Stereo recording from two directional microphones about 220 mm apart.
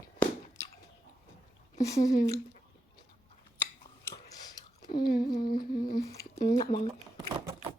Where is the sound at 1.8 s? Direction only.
15° left (ahead or behind).